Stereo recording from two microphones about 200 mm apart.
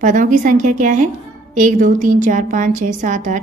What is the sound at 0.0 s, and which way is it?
A woman's voice, 40° right (ahead or behind).